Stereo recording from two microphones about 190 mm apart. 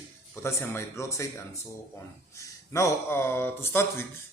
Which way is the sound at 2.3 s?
15° left (ahead or behind).